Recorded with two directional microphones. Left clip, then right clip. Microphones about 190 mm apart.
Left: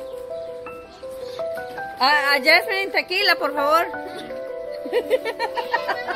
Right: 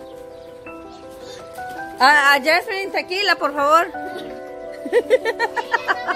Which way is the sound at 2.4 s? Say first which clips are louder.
Left 1 dB; centre (ahead or behind).